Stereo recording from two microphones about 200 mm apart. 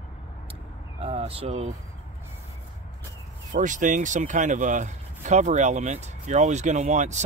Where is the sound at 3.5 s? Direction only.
40° right (ahead or behind).